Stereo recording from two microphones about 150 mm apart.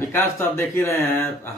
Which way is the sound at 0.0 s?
15° left (ahead or behind).